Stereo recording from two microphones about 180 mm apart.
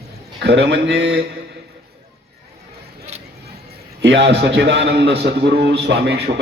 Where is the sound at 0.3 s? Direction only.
70° right (ahead or behind).